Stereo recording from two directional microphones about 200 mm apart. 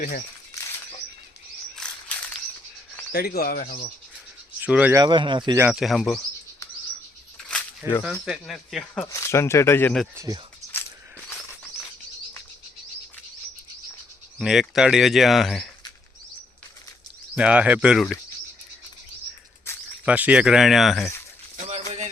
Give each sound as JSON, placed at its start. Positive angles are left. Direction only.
{"t": 0.0, "sound": "speech", "side_deg": 45}
{"t": 1.7, "sound": "a sound", "side_deg": 5}
{"t": 3.1, "sound": "speech", "side_deg": 50}
{"t": 4.6, "sound": "speech", "side_deg": -5}
{"t": 5.6, "sound": "speech", "side_deg": 0}
{"t": 7.4, "sound": "a sound", "side_deg": 5}
{"t": 8.2, "sound": "speech", "side_deg": 0}
{"t": 9.0, "sound": "speech", "side_deg": 15}
{"t": 10.2, "sound": "speech", "side_deg": -20}
{"t": 14.3, "sound": "speech", "side_deg": 0}
{"t": 17.3, "sound": "speech", "side_deg": -5}
{"t": 20.1, "sound": "speech", "side_deg": -5}
{"t": 21.5, "sound": "a sound", "side_deg": -35}